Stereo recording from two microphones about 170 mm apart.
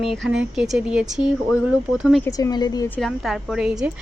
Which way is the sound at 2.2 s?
20° left (ahead or behind).